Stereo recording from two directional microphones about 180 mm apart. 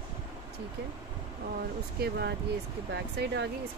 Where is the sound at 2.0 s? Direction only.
60° right (ahead or behind).